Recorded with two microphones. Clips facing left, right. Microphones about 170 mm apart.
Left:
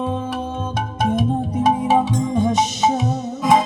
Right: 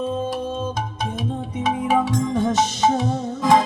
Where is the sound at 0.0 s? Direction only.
65° left (ahead or behind); by 1.6 s 50° left (ahead or behind).